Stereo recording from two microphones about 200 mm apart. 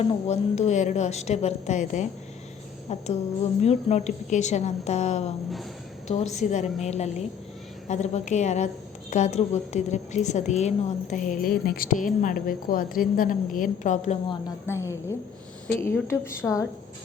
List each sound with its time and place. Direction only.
0.1 s a woman's voice: 35° left (ahead or behind)
14.7 s a woman's voice: 15° left (ahead or behind)